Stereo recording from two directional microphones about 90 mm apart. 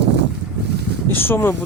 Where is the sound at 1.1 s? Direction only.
25° left (ahead or behind).